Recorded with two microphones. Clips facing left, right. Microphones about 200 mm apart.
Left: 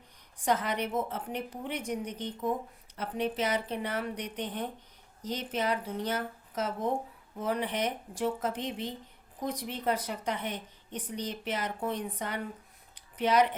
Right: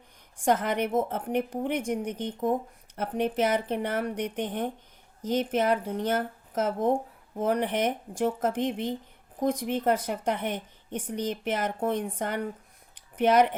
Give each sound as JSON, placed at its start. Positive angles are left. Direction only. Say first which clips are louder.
{"t": 0.3, "sound": "a woman's voice", "louder": "right 4 dB", "side_deg": -50}